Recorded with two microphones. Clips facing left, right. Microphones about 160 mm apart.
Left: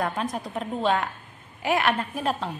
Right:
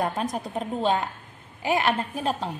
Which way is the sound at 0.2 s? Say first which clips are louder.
Right 1 dB; 40° right (ahead or behind).